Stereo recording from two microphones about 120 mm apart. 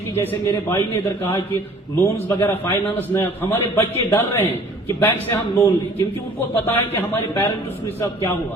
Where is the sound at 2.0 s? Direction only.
20° left (ahead or behind).